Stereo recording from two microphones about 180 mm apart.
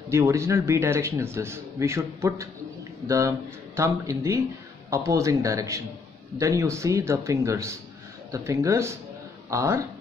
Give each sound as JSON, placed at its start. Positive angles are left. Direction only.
{"t": 0.1, "sound": "speech", "side_deg": -15}